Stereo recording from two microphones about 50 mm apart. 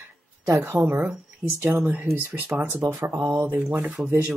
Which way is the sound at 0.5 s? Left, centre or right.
Right.